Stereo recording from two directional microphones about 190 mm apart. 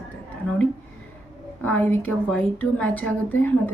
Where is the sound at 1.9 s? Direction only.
10° left (ahead or behind).